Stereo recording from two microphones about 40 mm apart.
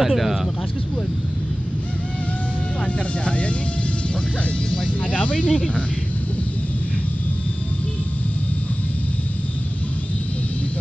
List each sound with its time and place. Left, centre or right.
0.0 s speech: centre
3.3 s speech: left
4.8 s speech: left